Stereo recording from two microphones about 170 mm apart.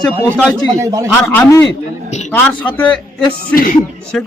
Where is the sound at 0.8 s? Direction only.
20° right (ahead or behind).